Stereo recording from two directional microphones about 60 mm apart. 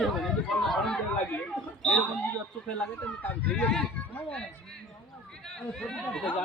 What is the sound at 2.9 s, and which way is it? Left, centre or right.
Speech, left.